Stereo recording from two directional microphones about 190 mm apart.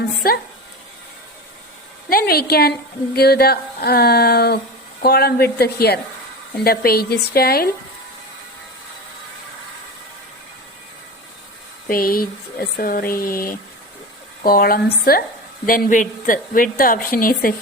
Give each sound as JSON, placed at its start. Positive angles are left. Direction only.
{"t": 0.2, "sound": "a woman's voice", "side_deg": 50}
{"t": 2.0, "sound": "a woman's voice", "side_deg": 55}
{"t": 11.9, "sound": "a woman's voice", "side_deg": 50}